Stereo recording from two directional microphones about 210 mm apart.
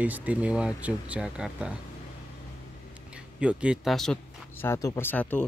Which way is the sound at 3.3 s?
5° right (ahead or behind).